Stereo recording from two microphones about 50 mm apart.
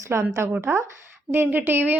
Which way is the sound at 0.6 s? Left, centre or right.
Right.